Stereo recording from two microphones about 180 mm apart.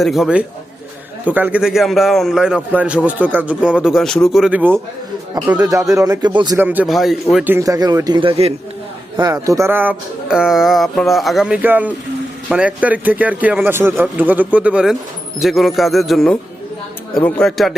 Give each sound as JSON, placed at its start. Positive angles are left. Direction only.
{"t": 0.0, "sound": "a man's voice", "side_deg": 0}
{"t": 6.6, "sound": "a man's voice", "side_deg": -10}
{"t": 7.5, "sound": "a man's voice", "side_deg": -20}
{"t": 9.1, "sound": "a man's voice", "side_deg": -20}